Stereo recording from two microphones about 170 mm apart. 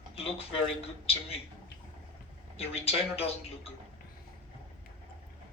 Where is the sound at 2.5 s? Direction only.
35° left (ahead or behind).